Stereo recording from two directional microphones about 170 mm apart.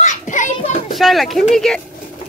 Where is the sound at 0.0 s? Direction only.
45° left (ahead or behind).